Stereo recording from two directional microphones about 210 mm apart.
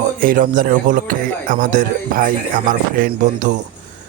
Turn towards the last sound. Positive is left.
turn(degrees=-35)  # may be behind; listen again after turning